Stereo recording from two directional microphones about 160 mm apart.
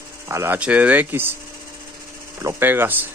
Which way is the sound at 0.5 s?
10° right (ahead or behind).